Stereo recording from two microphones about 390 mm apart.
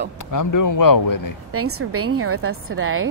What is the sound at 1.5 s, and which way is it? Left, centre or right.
A woman's voice, right.